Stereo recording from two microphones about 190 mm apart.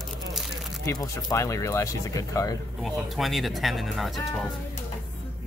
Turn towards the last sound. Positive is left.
turn(degrees=0)  # may be behind; listen again after turning